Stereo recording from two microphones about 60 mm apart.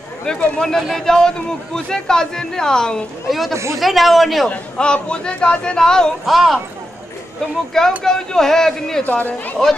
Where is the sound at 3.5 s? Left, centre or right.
Right.